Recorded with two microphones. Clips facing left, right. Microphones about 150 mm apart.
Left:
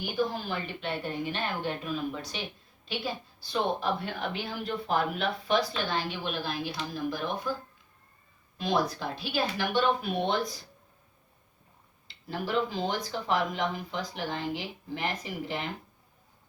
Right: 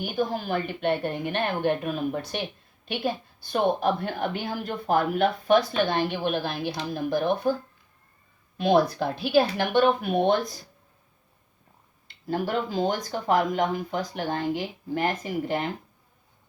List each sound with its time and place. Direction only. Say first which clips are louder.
0.0 s a woman's voice: right 3 dB; 50° right (ahead or behind)
8.5 s speech: right 7 dB; 60° right (ahead or behind)
12.0 s a woman's voice: right 6 dB; 45° right (ahead or behind)